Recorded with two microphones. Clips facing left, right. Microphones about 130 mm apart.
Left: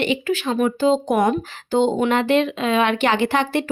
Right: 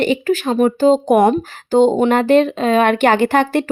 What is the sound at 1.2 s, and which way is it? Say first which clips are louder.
Speech: right 5 dB; 35° right (ahead or behind).